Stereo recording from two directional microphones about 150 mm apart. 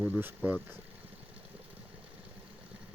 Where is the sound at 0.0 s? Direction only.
15° right (ahead or behind).